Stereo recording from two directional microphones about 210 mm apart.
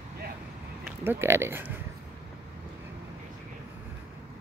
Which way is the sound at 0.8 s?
10° right (ahead or behind).